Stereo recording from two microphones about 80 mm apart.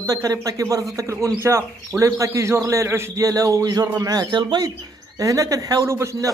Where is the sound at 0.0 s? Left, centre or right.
Right.